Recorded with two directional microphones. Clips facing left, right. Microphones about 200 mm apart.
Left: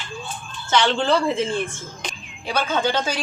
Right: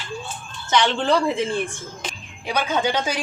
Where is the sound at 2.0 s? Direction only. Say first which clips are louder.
Even; 15° right (ahead or behind).